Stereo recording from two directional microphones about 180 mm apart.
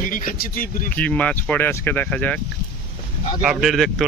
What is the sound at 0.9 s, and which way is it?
Speech, 10° left (ahead or behind).